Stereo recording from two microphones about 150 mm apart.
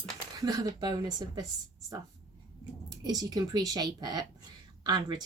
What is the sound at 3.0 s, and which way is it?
Speech, 25° right (ahead or behind).